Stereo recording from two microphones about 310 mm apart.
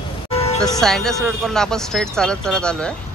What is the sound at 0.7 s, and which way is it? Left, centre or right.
Speech, centre.